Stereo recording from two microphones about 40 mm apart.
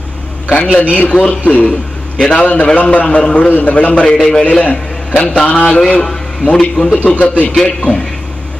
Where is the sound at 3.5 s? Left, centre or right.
Left.